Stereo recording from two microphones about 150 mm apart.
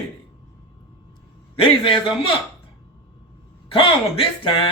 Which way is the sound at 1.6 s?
35° left (ahead or behind).